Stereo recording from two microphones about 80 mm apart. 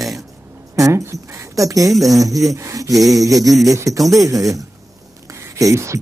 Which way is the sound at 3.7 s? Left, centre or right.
Right.